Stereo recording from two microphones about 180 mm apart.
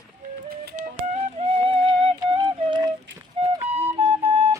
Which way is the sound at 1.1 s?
35° right (ahead or behind).